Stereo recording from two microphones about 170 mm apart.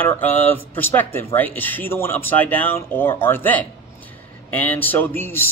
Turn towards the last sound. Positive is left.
turn(degrees=15)  # may be behind; listen again after turning